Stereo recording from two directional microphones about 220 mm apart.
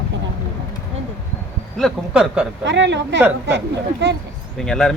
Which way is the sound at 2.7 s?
55° right (ahead or behind).